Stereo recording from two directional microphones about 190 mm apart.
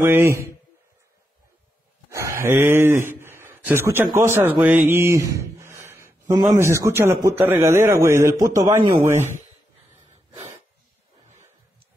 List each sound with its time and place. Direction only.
0.0 s a man's voice: 10° right (ahead or behind)
2.0 s a sound: 15° right (ahead or behind)
6.6 s a man's voice: 15° right (ahead or behind)